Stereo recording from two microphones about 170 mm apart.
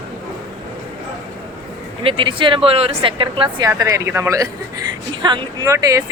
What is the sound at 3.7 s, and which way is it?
Speech, 20° right (ahead or behind).